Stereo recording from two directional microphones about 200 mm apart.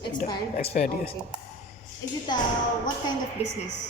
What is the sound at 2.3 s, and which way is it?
Speech, 20° left (ahead or behind).